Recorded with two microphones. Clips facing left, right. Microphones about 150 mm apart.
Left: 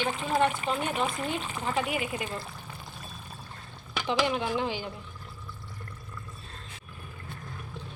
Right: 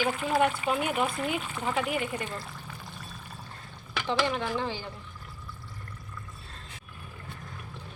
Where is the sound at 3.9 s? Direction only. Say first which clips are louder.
Left 1 dB; 15° left (ahead or behind).